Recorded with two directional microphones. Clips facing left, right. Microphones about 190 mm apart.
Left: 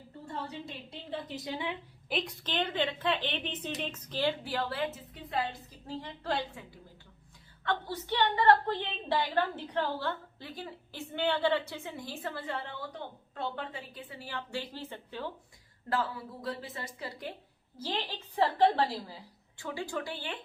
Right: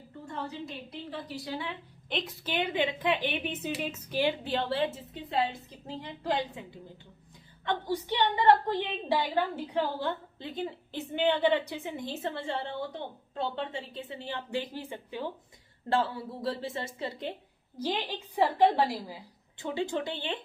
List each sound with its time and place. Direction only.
0.9 s a woman's voice: 20° left (ahead or behind)
2.0 s a woman's voice: centre (ahead or behind)
15.9 s a woman's voice: 30° right (ahead or behind)